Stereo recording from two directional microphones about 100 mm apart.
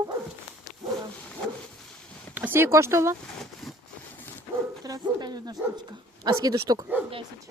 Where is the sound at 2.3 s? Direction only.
20° right (ahead or behind).